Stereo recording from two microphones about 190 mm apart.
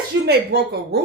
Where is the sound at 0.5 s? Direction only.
60° right (ahead or behind).